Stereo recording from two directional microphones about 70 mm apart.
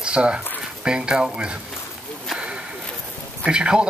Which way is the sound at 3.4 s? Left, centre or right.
Centre.